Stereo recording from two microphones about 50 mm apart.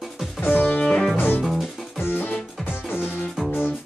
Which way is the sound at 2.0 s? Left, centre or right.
Left.